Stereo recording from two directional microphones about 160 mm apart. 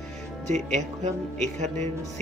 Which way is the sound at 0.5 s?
45° right (ahead or behind).